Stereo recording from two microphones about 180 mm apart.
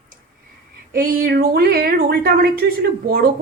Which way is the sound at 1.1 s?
55° right (ahead or behind).